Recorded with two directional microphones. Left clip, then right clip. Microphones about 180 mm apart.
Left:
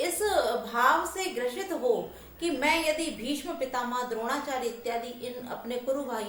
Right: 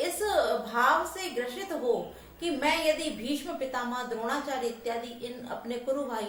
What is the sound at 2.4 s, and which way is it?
A woman's voice, 15° left (ahead or behind).